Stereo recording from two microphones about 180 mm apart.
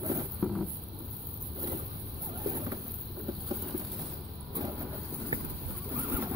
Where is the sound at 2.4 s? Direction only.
20° right (ahead or behind).